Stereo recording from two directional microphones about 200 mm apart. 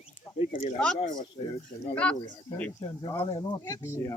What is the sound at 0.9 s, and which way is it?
Speech, 20° left (ahead or behind).